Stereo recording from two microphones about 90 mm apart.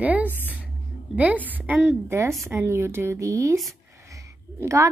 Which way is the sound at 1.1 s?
15° right (ahead or behind).